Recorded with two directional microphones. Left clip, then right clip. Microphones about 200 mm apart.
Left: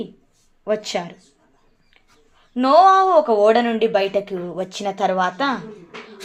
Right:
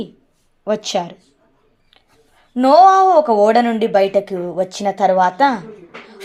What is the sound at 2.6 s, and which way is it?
Speech, 25° right (ahead or behind).